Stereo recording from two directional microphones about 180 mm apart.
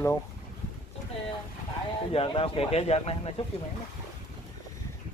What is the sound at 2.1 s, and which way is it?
Speech, 30° left (ahead or behind).